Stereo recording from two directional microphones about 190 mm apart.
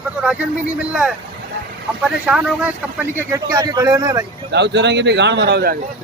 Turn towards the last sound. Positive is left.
turn(degrees=-55)  # may be behind; listen again after turning